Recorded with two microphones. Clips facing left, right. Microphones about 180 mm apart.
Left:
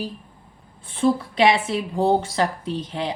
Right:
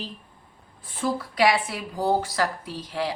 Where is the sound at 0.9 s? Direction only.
25° left (ahead or behind).